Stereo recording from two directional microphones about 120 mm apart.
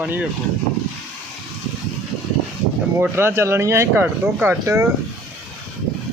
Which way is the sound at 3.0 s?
20° right (ahead or behind).